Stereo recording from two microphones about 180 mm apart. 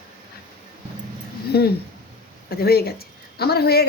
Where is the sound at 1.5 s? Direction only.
65° left (ahead or behind).